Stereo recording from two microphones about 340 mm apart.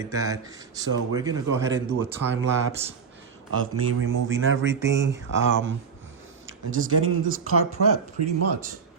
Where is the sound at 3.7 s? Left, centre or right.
Right.